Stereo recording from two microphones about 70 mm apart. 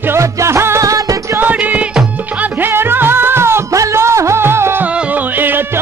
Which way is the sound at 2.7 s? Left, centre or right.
Right.